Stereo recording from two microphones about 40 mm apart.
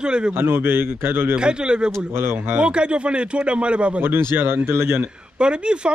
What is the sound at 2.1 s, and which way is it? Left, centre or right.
Speech, right.